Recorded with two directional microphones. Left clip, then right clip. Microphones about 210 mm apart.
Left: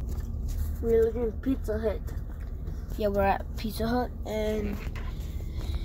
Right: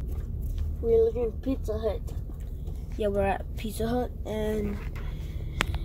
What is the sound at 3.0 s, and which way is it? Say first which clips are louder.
Speech: left 1 dB; centre (ahead or behind).